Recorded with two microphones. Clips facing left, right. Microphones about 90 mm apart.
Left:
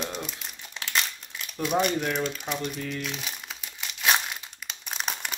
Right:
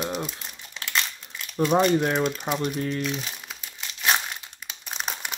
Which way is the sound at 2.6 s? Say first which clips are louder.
Right 5 dB; 40° right (ahead or behind).